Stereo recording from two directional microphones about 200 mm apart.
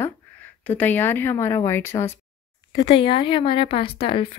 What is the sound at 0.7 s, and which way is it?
A woman's voice, 10° left (ahead or behind).